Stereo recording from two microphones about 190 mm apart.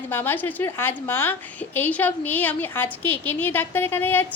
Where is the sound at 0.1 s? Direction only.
10° left (ahead or behind).